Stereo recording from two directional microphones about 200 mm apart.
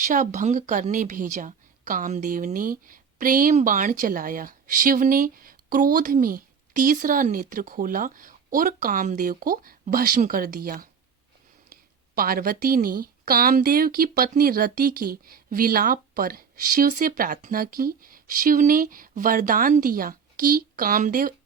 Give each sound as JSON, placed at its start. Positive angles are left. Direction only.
{"t": 0.1, "sound": "a woman's voice", "side_deg": -40}